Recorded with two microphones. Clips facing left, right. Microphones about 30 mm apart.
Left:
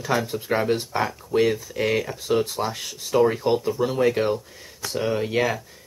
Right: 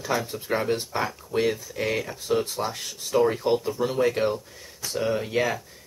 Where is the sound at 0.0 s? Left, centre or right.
Centre.